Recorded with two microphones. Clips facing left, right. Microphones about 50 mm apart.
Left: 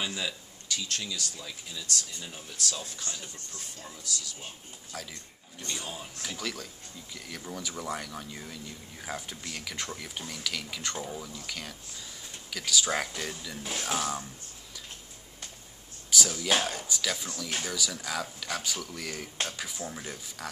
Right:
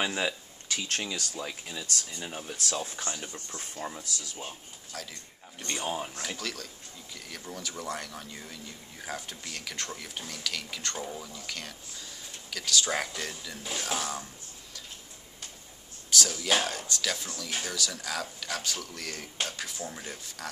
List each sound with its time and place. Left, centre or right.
0.0 s speech: right
4.9 s speech: centre
5.7 s speech: right
6.3 s speech: centre
16.1 s speech: centre